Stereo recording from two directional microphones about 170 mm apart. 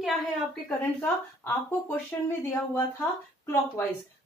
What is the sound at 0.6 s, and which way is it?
A woman's voice, 10° left (ahead or behind).